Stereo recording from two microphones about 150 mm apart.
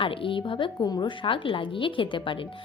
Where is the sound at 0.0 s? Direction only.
35° left (ahead or behind).